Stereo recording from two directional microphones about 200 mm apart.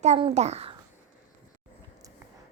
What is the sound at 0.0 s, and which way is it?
Speech, 30° right (ahead or behind).